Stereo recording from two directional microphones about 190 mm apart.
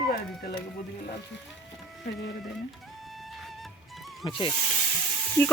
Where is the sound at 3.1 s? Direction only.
Centre (ahead or behind).